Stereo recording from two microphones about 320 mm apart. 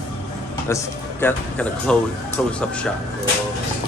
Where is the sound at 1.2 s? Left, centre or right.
Centre.